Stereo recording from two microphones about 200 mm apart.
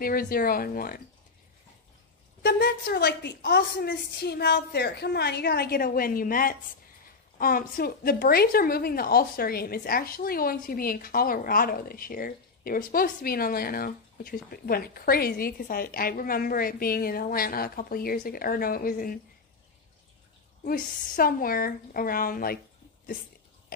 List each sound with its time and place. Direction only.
0.0 s a woman's voice: 45° left (ahead or behind)
2.4 s a woman's voice: 55° left (ahead or behind)
20.6 s a woman's voice: 45° left (ahead or behind)